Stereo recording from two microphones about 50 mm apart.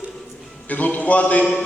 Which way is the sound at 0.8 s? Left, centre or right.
Left.